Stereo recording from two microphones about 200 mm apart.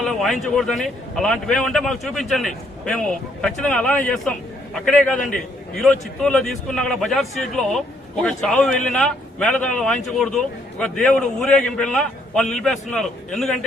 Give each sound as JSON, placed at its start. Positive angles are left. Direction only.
{"t": 0.0, "sound": "a man's voice", "side_deg": 0}